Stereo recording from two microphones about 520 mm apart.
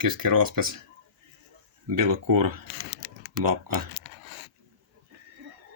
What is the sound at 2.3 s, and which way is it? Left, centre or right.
Speech, right.